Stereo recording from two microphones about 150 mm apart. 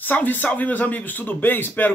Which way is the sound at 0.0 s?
10° left (ahead or behind).